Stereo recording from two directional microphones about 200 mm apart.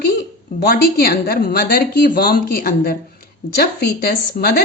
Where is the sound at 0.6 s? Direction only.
50° left (ahead or behind).